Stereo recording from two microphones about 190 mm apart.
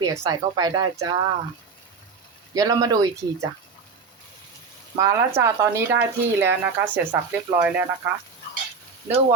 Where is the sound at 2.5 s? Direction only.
20° right (ahead or behind).